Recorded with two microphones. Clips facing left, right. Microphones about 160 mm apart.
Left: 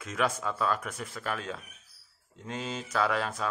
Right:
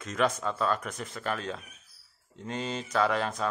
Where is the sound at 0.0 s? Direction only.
5° left (ahead or behind).